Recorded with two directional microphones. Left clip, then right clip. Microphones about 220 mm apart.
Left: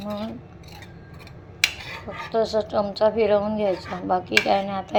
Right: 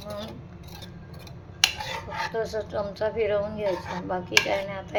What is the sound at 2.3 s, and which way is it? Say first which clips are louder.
Speech: left 10 dB; 20° left (ahead or behind).